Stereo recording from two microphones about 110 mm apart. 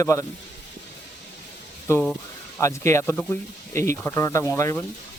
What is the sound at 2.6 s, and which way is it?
Speech, 25° left (ahead or behind).